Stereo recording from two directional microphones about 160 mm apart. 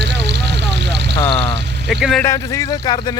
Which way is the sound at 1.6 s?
90° right.